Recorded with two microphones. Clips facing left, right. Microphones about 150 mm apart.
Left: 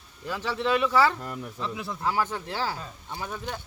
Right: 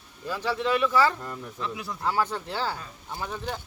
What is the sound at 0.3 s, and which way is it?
Speech, 15° left (ahead or behind).